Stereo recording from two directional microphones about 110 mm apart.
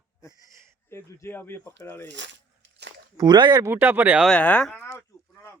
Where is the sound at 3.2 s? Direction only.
45° right (ahead or behind).